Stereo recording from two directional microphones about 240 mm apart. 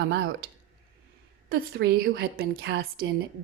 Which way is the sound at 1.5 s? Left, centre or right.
Right.